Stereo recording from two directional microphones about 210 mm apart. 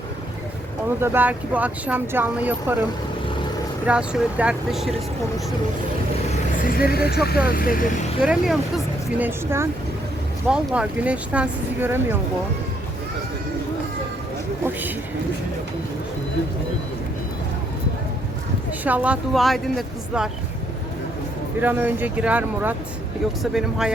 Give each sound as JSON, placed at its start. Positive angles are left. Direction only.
{"t": 1.0, "sound": "speech", "side_deg": -10}
{"t": 3.8, "sound": "speech", "side_deg": -5}
{"t": 6.7, "sound": "speech", "side_deg": 45}
{"t": 8.2, "sound": "speech", "side_deg": 0}
{"t": 14.6, "sound": "a sound", "side_deg": -10}
{"t": 18.9, "sound": "speech", "side_deg": -5}
{"t": 21.6, "sound": "speech", "side_deg": -10}